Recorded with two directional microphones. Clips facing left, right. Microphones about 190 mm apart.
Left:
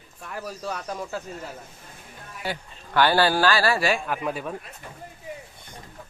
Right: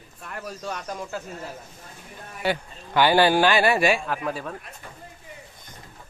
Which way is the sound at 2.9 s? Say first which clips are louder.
Right 2 dB; 15° right (ahead or behind).